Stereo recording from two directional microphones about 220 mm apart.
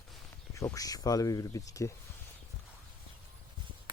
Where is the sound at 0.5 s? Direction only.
15° left (ahead or behind).